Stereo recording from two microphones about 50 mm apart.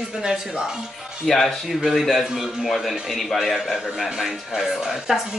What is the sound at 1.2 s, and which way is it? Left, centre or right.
A woman's voice, centre.